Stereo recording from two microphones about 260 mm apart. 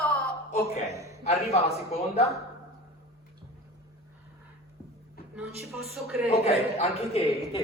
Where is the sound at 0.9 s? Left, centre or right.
Centre.